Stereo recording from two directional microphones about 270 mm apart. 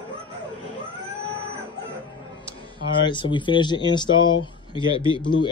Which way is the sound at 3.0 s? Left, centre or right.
Centre.